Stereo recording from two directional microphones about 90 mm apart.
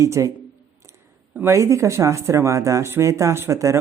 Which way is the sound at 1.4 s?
35° right (ahead or behind).